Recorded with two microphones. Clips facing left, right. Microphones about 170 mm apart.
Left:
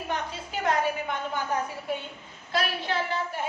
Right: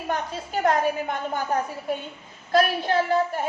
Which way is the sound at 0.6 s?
45° right (ahead or behind).